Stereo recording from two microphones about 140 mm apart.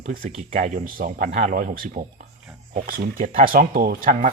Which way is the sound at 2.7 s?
90° right.